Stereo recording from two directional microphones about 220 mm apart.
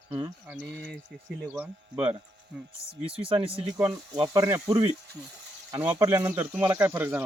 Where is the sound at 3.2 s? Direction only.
20° right (ahead or behind).